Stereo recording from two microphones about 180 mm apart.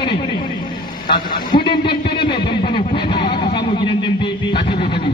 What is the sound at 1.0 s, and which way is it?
A man's voice, 25° left (ahead or behind).